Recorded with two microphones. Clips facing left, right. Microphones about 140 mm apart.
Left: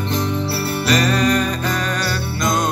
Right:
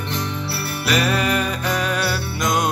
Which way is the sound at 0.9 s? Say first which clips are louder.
Left 2 dB; 5° right (ahead or behind).